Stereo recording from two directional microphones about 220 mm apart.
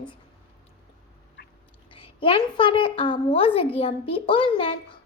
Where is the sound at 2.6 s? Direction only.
20° left (ahead or behind).